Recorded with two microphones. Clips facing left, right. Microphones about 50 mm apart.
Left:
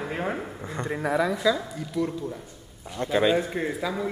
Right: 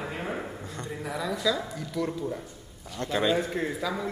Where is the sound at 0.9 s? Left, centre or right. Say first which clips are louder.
Left 8 dB; left.